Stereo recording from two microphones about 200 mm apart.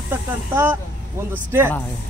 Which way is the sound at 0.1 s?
10° right (ahead or behind).